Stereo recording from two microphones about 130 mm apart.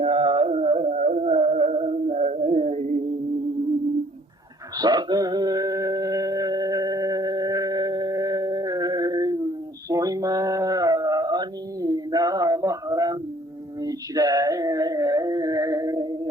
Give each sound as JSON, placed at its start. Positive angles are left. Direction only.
{"t": 0.0, "sound": "music", "side_deg": -45}
{"t": 1.3, "sound": "music", "side_deg": -50}
{"t": 4.8, "sound": "music", "side_deg": -30}
{"t": 9.9, "sound": "a sound", "side_deg": -25}